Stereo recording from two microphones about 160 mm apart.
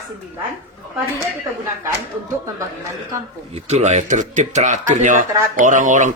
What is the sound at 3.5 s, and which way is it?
Speech, 45° right (ahead or behind).